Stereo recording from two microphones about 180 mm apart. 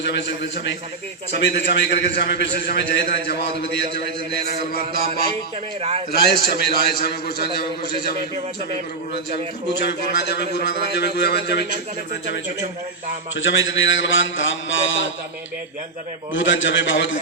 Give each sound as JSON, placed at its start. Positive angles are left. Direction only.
{"t": 0.0, "sound": "a man's voice", "side_deg": 70}
{"t": 4.4, "sound": "a man's voice", "side_deg": 60}
{"t": 6.2, "sound": "a man's voice", "side_deg": 60}
{"t": 9.8, "sound": "a man's voice", "side_deg": 70}
{"t": 13.3, "sound": "a man's voice", "side_deg": 90}
{"t": 16.3, "sound": "a man's voice", "side_deg": 90}